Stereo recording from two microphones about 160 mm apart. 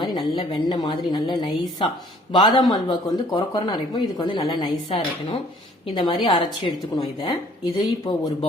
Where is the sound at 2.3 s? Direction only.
30° left (ahead or behind).